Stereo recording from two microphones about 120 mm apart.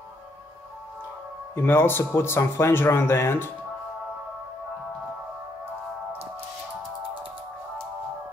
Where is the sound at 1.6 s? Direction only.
20° left (ahead or behind).